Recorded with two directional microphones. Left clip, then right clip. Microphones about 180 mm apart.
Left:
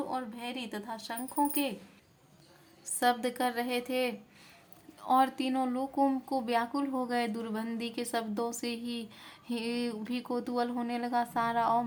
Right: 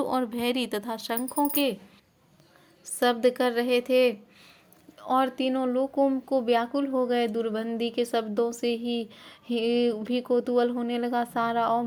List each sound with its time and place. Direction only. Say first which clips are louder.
0.0 s speech: right 9 dB; 50° right (ahead or behind)
2.8 s speech: right 6 dB; 30° right (ahead or behind)